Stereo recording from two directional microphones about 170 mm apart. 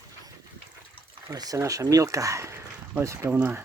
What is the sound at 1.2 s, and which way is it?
Speech, 20° right (ahead or behind).